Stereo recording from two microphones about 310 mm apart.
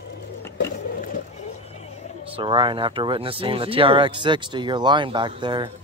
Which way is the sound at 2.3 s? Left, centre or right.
Centre.